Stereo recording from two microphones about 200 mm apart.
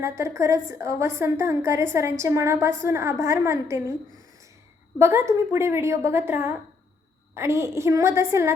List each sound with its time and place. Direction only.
0.0 s a woman's voice: 15° right (ahead or behind)
4.9 s a woman's voice: 15° right (ahead or behind)